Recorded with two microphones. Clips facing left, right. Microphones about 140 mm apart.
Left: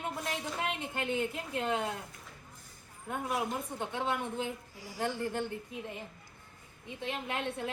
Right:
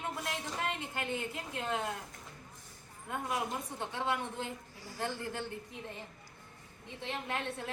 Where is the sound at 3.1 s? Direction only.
15° left (ahead or behind).